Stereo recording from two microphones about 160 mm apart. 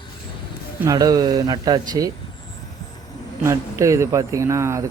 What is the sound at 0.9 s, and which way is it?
Speech, 25° right (ahead or behind).